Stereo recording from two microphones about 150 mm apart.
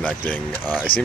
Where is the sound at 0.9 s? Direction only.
35° left (ahead or behind).